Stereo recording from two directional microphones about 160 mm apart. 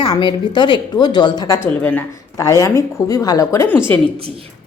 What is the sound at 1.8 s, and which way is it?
A woman's voice, 10° left (ahead or behind).